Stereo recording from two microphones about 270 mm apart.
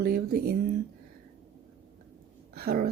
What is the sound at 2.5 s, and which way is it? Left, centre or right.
Speech, right.